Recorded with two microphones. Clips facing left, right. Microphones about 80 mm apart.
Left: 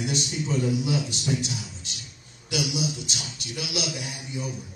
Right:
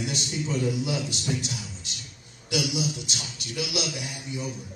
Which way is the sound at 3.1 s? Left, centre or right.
Left.